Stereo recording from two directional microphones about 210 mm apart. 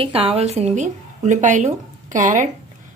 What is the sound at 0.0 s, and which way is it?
Speech, 25° right (ahead or behind).